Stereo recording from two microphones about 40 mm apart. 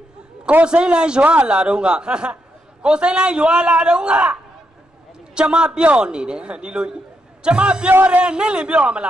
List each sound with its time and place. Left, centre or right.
0.7 s a man's voice: right